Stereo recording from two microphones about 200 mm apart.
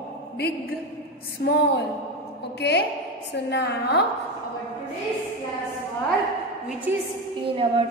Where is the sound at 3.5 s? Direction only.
55° left (ahead or behind).